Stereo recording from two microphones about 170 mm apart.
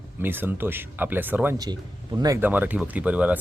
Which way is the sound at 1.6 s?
25° right (ahead or behind).